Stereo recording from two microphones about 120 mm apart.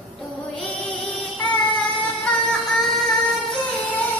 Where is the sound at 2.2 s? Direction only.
5° left (ahead or behind).